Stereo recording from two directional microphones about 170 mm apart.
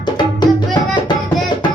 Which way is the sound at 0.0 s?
25° left (ahead or behind).